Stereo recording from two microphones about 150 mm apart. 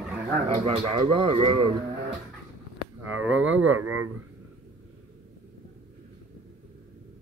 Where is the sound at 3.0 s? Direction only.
10° right (ahead or behind).